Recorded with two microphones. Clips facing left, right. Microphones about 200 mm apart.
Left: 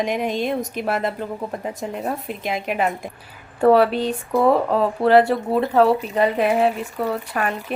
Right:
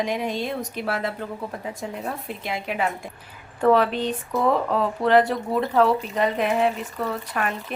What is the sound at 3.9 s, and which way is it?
Speech, 10° left (ahead or behind).